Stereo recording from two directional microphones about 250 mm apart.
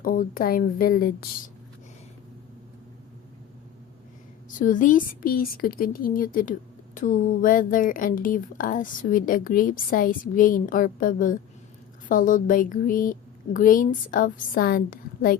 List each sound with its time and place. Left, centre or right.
0.0 s a woman's voice: left
4.6 s a woman's voice: left